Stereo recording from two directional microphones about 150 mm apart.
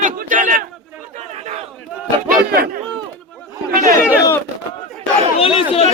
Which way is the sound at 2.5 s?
80° right.